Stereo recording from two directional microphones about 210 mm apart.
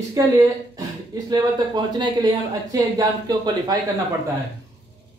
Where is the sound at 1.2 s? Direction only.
20° right (ahead or behind).